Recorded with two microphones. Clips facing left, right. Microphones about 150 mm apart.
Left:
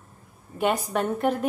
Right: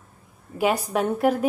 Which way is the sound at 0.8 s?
Centre (ahead or behind).